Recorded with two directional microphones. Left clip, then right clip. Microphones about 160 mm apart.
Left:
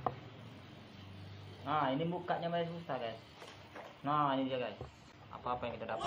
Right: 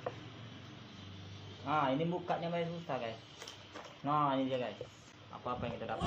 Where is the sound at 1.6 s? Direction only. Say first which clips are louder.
Right 1 dB; 25° right (ahead or behind).